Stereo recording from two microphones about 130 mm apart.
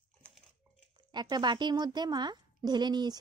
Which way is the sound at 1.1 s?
35° right (ahead or behind).